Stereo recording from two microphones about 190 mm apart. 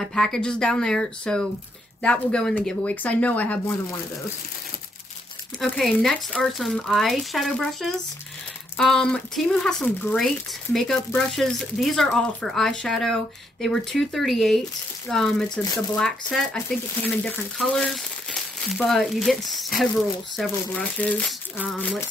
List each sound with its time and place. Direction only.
0.0 s speech: 5° left (ahead or behind)
5.6 s speech: centre (ahead or behind)